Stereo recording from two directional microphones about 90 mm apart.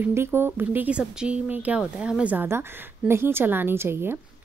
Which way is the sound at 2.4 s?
25° right (ahead or behind).